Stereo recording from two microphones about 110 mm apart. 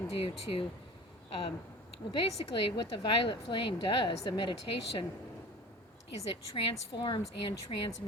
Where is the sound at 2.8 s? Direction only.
50° left (ahead or behind).